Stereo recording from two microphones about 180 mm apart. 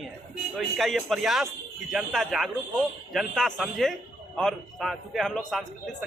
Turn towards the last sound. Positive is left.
turn(degrees=0)  # may be behind; listen again after turning